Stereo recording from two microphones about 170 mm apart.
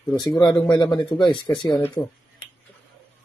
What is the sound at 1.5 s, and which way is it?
Speech, 25° left (ahead or behind).